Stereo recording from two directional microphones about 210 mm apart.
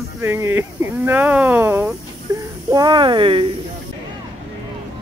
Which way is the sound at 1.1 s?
10° right (ahead or behind).